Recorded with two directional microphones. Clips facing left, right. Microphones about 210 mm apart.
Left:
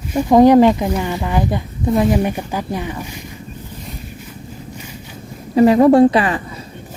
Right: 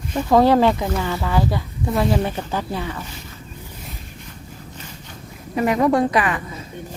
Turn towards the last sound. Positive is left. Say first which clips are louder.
# left 7 dB
turn(degrees=30)  # may be behind; listen again after turning